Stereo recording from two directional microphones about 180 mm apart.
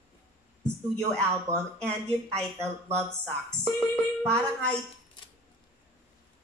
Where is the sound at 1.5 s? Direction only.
5° left (ahead or behind).